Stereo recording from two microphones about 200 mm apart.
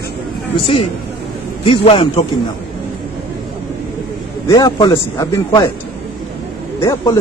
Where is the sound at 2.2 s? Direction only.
20° left (ahead or behind).